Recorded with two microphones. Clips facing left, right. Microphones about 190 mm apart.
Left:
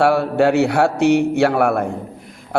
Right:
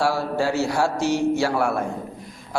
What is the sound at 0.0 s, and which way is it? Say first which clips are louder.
A man's voice: left 7 dB; 60° left (ahead or behind).